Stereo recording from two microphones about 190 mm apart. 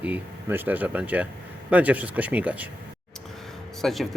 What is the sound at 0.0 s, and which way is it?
Speech, 10° right (ahead or behind).